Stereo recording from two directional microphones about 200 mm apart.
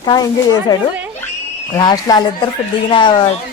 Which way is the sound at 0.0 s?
20° left (ahead or behind).